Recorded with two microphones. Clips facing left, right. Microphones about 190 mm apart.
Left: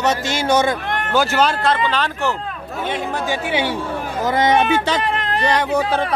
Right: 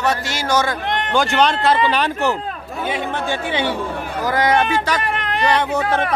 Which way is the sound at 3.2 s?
10° left (ahead or behind).